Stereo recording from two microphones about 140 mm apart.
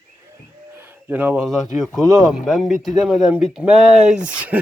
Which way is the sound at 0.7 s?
15° right (ahead or behind).